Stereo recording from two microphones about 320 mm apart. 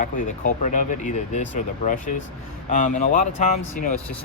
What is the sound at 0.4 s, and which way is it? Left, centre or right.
Speech, left.